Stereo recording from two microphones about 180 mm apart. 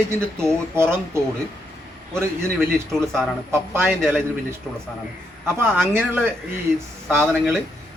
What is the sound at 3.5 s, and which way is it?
A man's voice, 15° right (ahead or behind).